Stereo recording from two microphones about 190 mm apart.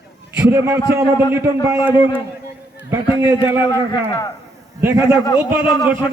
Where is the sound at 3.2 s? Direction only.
15° right (ahead or behind).